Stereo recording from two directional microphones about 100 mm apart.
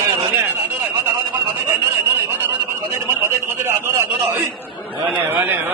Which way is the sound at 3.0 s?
25° right (ahead or behind).